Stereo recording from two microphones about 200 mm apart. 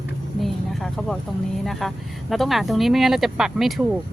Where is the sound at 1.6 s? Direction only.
Centre (ahead or behind).